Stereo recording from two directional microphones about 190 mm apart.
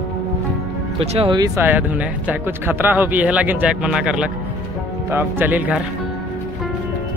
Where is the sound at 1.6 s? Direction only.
10° right (ahead or behind).